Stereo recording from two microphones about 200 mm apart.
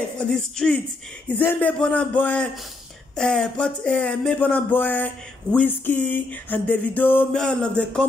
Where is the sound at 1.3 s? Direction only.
5° left (ahead or behind).